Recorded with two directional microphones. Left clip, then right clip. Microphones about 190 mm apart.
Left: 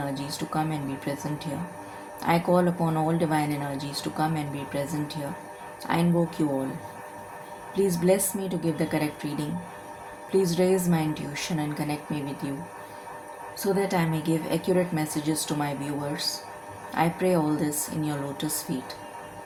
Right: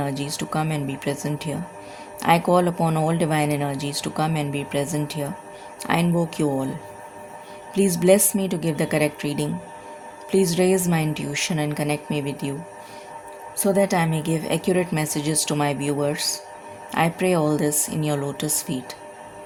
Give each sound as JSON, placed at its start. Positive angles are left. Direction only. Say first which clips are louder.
{"t": 0.0, "sound": "speech", "louder": "right 4 dB", "side_deg": -55}
{"t": 7.8, "sound": "speech", "louder": "right 6 dB", "side_deg": -60}
{"t": 13.6, "sound": "speech", "louder": "right 6 dB", "side_deg": -55}
{"t": 16.9, "sound": "speech", "louder": "right 3 dB", "side_deg": -60}